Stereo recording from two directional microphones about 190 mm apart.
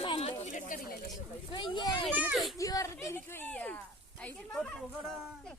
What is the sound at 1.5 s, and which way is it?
Speech, 25° left (ahead or behind).